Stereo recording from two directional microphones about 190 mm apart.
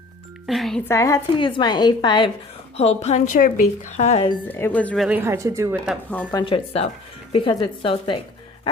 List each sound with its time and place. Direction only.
0.4 s speech: centre (ahead or behind)
0.9 s a woman's voice: 15° left (ahead or behind); by 4.3 s 35° left (ahead or behind)
4.4 s speech: 10° left (ahead or behind)
5.0 s speech: 10° right (ahead or behind)
6.1 s speech: 10° left (ahead or behind)
6.4 s a woman's voice: 30° left (ahead or behind)